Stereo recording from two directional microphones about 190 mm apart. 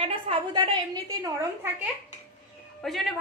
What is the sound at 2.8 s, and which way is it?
Speech, centre (ahead or behind).